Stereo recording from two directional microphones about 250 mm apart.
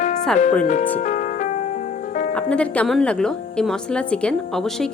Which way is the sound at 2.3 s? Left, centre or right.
Centre.